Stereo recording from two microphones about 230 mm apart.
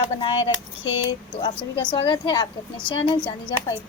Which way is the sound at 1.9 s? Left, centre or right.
Centre.